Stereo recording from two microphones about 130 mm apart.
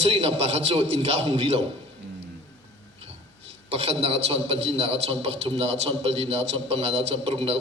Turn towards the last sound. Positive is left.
turn(degrees=-50)  # may be behind; listen again after turning